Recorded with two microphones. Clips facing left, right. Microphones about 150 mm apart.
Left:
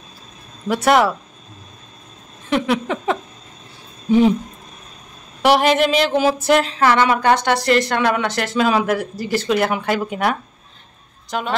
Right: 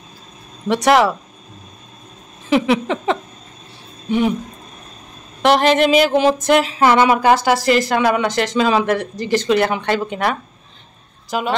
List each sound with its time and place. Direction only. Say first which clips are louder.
0.7 s speech: right 1 dB; centre (ahead or behind)
2.5 s speech: right 3 dB; centre (ahead or behind)
5.4 s speech: right 1 dB; 5° left (ahead or behind)
6.8 s speech: right 2 dB; 15° right (ahead or behind); by 10.3 s 5° left (ahead or behind)
11.2 s a woman's voice: right 3 dB; 5° right (ahead or behind)